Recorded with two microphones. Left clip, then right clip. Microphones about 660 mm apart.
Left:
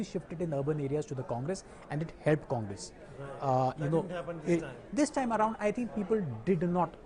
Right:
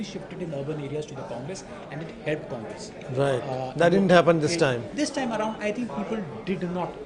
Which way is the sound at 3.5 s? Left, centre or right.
Left.